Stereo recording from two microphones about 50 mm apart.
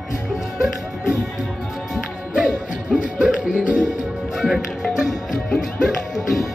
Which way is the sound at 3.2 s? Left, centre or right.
Right.